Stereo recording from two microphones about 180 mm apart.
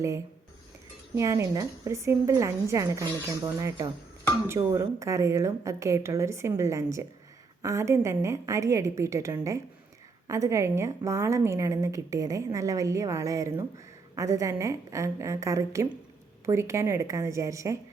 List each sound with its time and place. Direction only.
1.1 s a woman's voice: 15° right (ahead or behind)